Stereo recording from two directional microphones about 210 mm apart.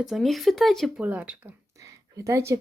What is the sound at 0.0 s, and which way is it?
Speech, centre (ahead or behind).